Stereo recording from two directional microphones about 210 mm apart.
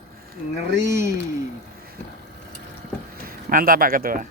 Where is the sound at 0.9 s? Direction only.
15° right (ahead or behind).